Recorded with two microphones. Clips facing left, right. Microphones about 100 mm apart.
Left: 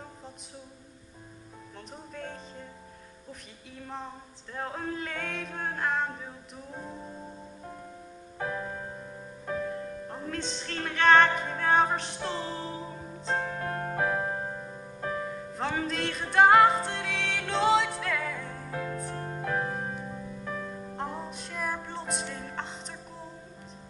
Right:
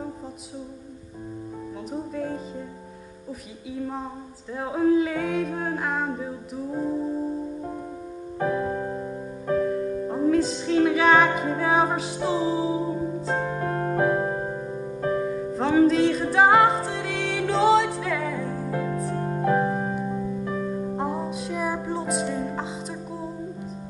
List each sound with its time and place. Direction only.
3.7 s singing: 5° right (ahead or behind)
8.6 s music: 20° right (ahead or behind)
9.7 s music: 10° right (ahead or behind)
15.0 s music: 5° right (ahead or behind)